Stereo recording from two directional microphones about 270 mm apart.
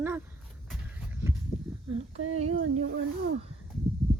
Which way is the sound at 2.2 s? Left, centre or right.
Right.